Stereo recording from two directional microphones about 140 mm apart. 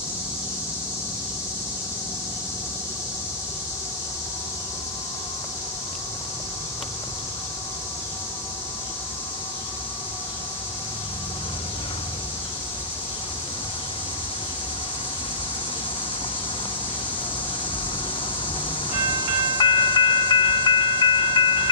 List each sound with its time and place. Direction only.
19.1 s train: 35° left (ahead or behind)